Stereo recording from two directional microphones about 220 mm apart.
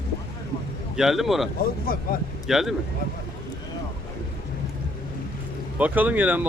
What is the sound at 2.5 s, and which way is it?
Speech, centre (ahead or behind).